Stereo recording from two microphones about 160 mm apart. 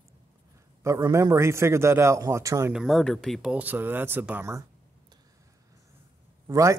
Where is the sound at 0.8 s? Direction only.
20° right (ahead or behind).